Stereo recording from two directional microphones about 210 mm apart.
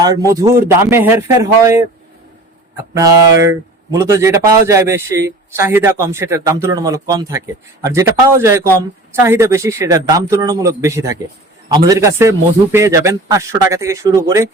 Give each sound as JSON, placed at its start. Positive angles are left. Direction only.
{"t": 0.0, "sound": "a man's voice", "side_deg": -15}
{"t": 2.9, "sound": "a man's voice", "side_deg": -15}